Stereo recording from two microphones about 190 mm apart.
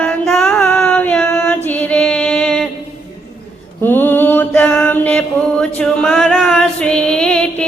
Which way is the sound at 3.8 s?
10° left (ahead or behind).